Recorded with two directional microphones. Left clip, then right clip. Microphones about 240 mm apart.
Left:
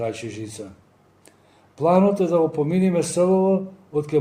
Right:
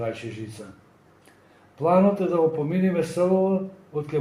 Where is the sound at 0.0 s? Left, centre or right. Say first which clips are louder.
Left 3 dB; left.